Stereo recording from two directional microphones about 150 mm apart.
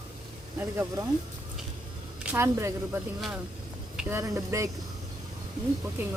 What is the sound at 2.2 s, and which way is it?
Speech, 15° right (ahead or behind).